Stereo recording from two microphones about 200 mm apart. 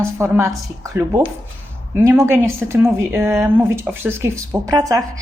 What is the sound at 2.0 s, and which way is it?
A woman's voice, 10° right (ahead or behind).